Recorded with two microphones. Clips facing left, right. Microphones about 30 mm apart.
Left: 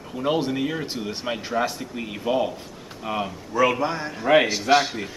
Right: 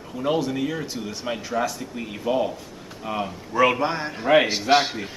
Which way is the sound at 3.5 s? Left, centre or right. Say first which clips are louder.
Right 1 dB; centre.